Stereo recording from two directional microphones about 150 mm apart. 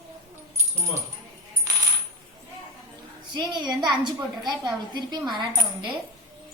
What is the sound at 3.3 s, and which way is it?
A woman's voice, 30° right (ahead or behind).